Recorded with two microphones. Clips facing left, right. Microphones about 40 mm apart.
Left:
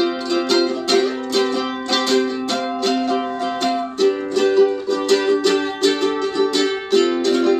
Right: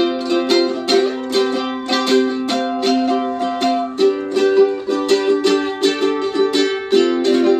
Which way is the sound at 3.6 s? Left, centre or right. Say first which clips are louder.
Right 2 dB; right.